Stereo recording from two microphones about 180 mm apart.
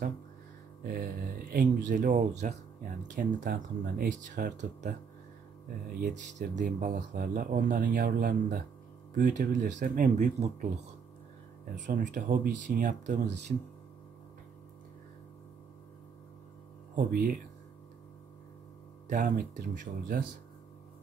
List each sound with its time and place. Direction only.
0.8 s speech: 55° right (ahead or behind)
5.9 s speech: 45° right (ahead or behind)
9.8 s speech: 60° right (ahead or behind)
10.1 s speech: 40° right (ahead or behind)
11.9 s speech: 50° right (ahead or behind)
16.9 s speech: 50° right (ahead or behind)
19.0 s speech: 45° right (ahead or behind)